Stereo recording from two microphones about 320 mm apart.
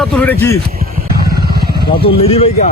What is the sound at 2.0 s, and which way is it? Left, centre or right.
Speech, centre.